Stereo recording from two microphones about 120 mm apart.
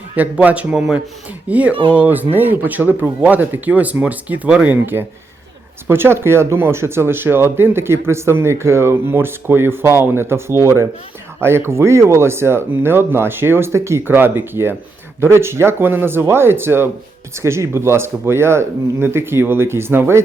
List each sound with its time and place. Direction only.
0.2 s speech: 10° right (ahead or behind)